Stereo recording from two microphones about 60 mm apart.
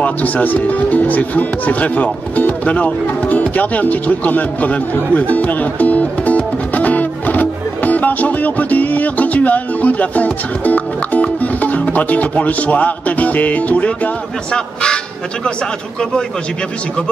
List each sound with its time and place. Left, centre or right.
0.0 s speech: left